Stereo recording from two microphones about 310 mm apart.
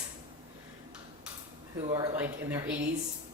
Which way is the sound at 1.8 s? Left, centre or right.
Centre.